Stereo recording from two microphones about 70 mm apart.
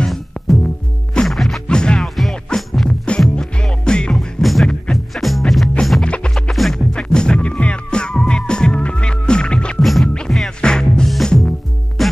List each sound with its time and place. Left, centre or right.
0.0 s music: centre
6.0 s music: centre
6.5 s music: centre
9.8 s music: centre
10.0 s music: centre